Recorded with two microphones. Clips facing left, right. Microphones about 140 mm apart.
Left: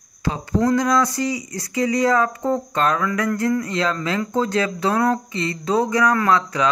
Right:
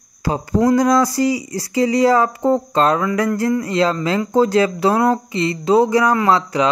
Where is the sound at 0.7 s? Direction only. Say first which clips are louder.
Right 6 dB; 35° right (ahead or behind).